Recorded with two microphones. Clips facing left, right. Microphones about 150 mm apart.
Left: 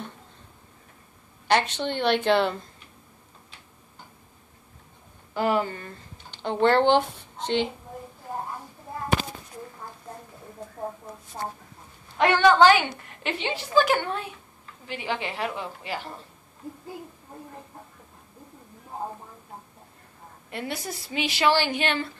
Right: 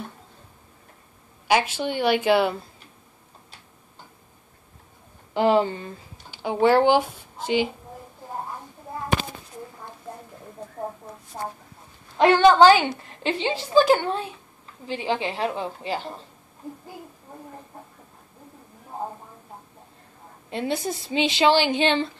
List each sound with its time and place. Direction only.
1.5 s a woman's voice: 5° right (ahead or behind)
5.3 s a woman's voice: 25° right (ahead or behind)
5.9 s speech: 5° right (ahead or behind)
12.2 s a woman's voice: 30° right (ahead or behind)
20.4 s a woman's voice: 25° right (ahead or behind)